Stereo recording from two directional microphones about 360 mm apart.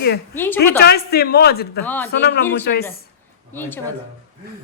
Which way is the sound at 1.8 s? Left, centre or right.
Centre.